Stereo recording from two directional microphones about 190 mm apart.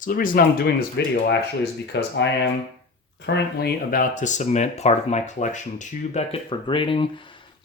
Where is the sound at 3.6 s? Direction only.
45° left (ahead or behind).